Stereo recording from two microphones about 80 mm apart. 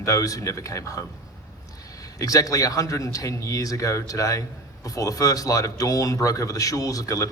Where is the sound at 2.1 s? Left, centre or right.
Left.